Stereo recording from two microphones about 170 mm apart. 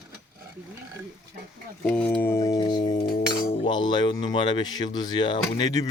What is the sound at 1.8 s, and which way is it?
A man's voice, 10° left (ahead or behind).